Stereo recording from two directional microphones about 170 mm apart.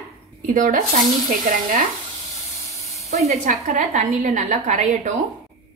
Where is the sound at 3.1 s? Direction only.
40° right (ahead or behind).